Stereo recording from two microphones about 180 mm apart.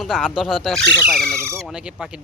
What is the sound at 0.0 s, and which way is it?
Speech, 5° right (ahead or behind).